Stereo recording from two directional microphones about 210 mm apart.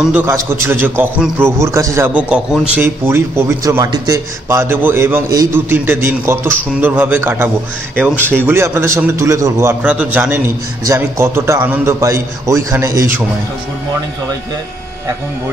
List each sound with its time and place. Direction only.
0.0 s a man's voice: 10° right (ahead or behind)